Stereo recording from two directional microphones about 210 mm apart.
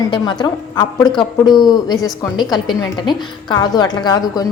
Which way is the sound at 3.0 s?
20° left (ahead or behind).